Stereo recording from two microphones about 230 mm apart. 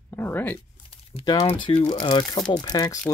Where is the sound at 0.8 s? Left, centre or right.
Left.